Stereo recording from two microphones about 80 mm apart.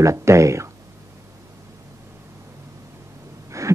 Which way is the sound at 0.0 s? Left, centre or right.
Right.